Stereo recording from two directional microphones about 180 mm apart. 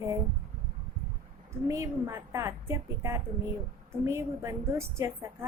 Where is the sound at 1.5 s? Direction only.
15° right (ahead or behind).